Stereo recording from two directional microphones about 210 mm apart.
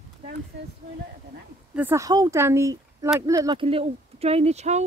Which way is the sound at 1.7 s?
10° right (ahead or behind).